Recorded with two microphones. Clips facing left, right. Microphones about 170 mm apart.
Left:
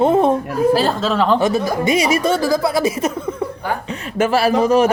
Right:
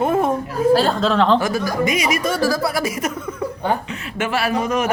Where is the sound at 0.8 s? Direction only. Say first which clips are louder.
Even; 5° left (ahead or behind).